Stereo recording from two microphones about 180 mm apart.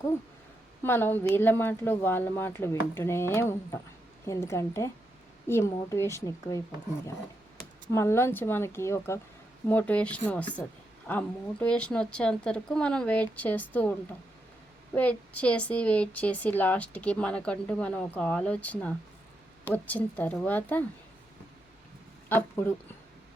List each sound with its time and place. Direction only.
0.8 s speech: 10° left (ahead or behind)
7.9 s speech: 15° left (ahead or behind)
22.3 s speech: 10° left (ahead or behind)